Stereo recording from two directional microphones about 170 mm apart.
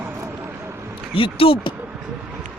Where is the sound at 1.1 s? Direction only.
30° left (ahead or behind).